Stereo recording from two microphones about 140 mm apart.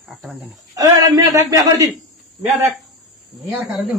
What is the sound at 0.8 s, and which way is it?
A man's voice, 25° right (ahead or behind).